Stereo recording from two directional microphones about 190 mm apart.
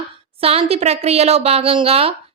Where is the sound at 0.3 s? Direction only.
30° right (ahead or behind).